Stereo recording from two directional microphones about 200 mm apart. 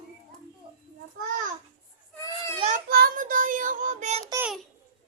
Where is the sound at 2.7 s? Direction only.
50° right (ahead or behind).